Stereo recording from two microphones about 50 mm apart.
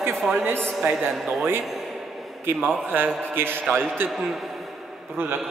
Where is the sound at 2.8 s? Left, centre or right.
Right.